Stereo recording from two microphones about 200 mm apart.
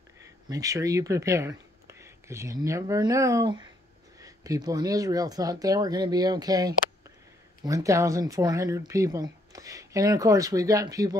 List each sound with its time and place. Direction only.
0.5 s speech: 15° right (ahead or behind)